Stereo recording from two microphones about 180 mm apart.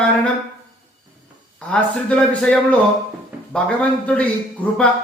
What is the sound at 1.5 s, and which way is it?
A man's voice, 10° left (ahead or behind).